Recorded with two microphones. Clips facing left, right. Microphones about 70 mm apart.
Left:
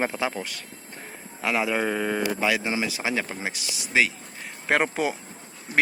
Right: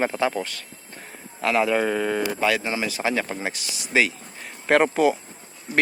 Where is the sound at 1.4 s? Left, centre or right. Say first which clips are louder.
Right 4 dB; centre.